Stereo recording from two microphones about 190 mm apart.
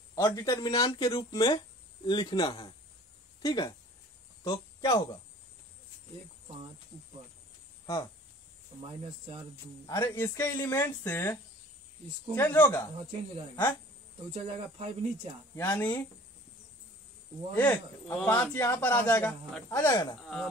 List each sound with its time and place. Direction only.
0.1 s speech: 15° left (ahead or behind)
7.8 s a sound: 20° left (ahead or behind)
9.8 s a man's voice: 15° left (ahead or behind)
12.4 s a man's voice: 10° left (ahead or behind)
14.3 s speech: 35° right (ahead or behind)
15.5 s a man's voice: 10° left (ahead or behind)
17.6 s a man's voice: 5° left (ahead or behind)
19.9 s speech: 20° left (ahead or behind)
20.2 s speech: 5° left (ahead or behind)